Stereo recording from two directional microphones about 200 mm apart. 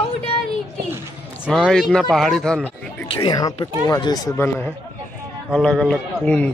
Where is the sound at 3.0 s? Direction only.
20° left (ahead or behind).